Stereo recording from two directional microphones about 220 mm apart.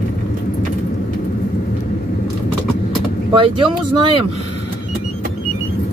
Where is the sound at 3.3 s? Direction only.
25° right (ahead or behind).